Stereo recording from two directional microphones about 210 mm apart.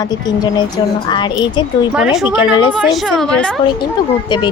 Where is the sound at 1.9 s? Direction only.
5° right (ahead or behind).